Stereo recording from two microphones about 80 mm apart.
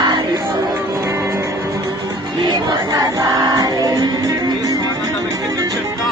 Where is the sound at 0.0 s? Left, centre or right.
Right.